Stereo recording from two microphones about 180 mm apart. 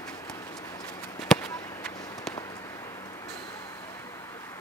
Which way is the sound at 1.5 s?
20° left (ahead or behind).